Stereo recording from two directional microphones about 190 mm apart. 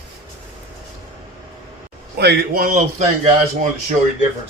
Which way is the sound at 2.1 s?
60° right (ahead or behind).